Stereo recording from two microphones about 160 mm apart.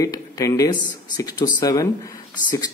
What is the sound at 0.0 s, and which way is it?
Speech, 20° left (ahead or behind).